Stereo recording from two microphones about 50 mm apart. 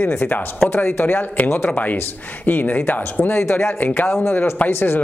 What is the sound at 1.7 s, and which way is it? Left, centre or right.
Speech, left.